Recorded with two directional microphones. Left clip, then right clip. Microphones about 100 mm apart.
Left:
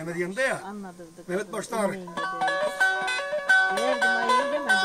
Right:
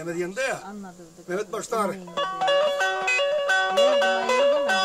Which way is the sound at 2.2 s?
10° right (ahead or behind).